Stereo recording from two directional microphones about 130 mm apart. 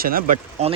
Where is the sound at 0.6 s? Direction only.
55° right (ahead or behind).